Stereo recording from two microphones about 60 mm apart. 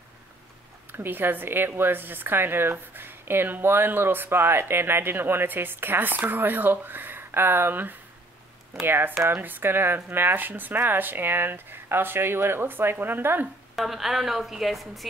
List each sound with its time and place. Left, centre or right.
0.9 s a woman's voice: right
13.7 s a woman's voice: centre